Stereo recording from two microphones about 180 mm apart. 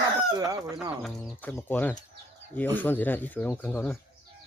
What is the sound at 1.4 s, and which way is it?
Speech, 10° left (ahead or behind).